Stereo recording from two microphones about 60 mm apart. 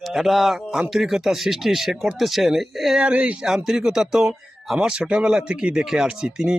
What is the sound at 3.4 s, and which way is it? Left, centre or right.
Speech, centre.